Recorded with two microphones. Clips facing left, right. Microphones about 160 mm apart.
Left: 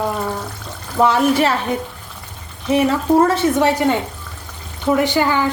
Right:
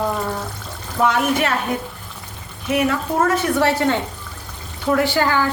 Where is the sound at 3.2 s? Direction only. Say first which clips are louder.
Left 2 dB; 20° left (ahead or behind).